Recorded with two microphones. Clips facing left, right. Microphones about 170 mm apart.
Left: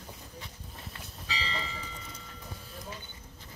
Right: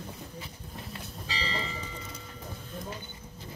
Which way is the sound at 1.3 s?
35° right (ahead or behind).